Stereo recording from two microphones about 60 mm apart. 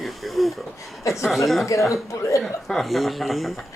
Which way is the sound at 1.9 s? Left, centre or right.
Left.